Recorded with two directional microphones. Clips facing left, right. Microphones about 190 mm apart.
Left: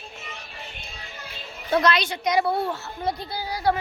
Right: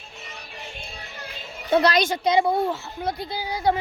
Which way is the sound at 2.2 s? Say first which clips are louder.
Even; 20° right (ahead or behind).